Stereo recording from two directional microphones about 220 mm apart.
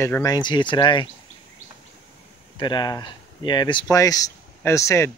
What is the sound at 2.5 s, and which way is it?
Speech, 20° left (ahead or behind).